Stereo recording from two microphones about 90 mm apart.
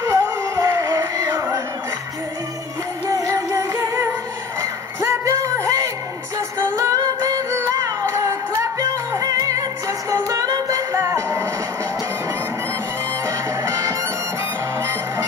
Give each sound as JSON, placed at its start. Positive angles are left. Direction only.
{"t": 0.0, "sound": "music", "side_deg": -35}
{"t": 3.1, "sound": "music", "side_deg": -35}
{"t": 4.6, "sound": "a sound", "side_deg": -35}
{"t": 6.6, "sound": "singing", "side_deg": -35}
{"t": 10.1, "sound": "music", "side_deg": -35}
{"t": 13.7, "sound": "music", "side_deg": -35}